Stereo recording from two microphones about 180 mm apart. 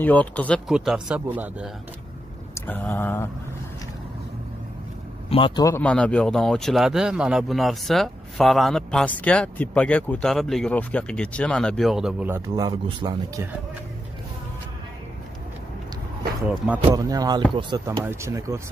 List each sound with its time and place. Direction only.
0.0 s speech: 10° left (ahead or behind)
0.7 s speech: 5° right (ahead or behind)
2.5 s a sound: 10° left (ahead or behind)
5.6 s speech: 10° left (ahead or behind); by 13.6 s 15° right (ahead or behind)
16.4 s speech: 5° right (ahead or behind)
16.9 s music: 20° right (ahead or behind)
17.6 s speech: 25° right (ahead or behind)